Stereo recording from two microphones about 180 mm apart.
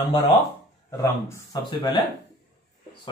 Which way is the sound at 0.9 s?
15° left (ahead or behind).